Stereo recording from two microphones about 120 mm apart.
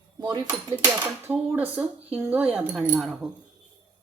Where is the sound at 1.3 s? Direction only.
15° right (ahead or behind).